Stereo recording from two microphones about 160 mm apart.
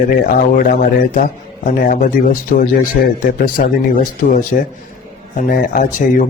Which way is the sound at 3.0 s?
70° left (ahead or behind).